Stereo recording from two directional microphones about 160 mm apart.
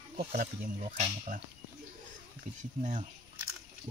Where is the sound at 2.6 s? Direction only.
50° right (ahead or behind).